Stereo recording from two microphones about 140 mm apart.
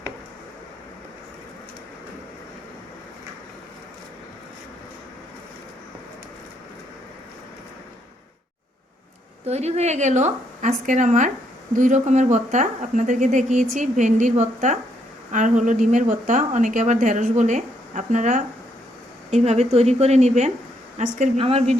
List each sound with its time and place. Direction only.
9.5 s a woman's voice: 50° right (ahead or behind)
21.3 s a woman's voice: 45° right (ahead or behind)